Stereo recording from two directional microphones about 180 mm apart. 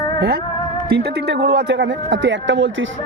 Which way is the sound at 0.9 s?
65° right (ahead or behind).